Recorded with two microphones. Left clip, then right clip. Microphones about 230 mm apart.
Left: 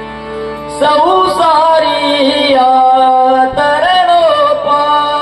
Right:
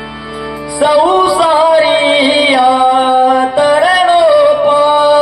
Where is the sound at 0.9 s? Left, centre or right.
Right.